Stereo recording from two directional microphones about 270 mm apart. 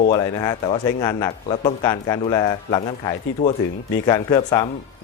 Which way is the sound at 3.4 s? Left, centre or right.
Left.